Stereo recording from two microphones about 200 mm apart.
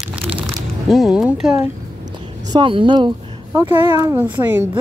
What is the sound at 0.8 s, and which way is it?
Speech, centre (ahead or behind).